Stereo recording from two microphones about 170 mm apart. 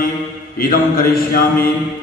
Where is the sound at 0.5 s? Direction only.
60° left (ahead or behind).